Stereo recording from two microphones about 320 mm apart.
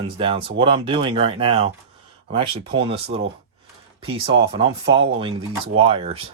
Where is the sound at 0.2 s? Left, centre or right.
Centre.